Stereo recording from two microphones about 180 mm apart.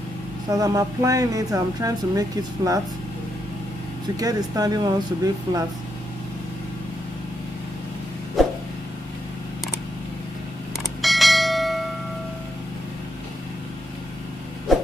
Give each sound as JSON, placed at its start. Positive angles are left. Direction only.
{"t": 0.5, "sound": "speech", "side_deg": -20}
{"t": 4.2, "sound": "speech", "side_deg": -20}
{"t": 8.4, "sound": "vehicle", "side_deg": 0}
{"t": 10.8, "sound": "bell", "side_deg": 0}